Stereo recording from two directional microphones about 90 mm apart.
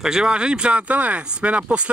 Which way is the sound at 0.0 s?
5° right (ahead or behind).